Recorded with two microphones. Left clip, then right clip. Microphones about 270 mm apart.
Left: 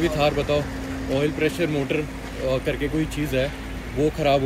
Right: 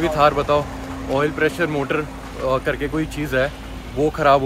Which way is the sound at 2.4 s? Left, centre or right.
Centre.